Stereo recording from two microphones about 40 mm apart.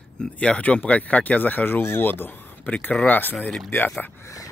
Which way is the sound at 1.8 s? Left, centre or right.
Left.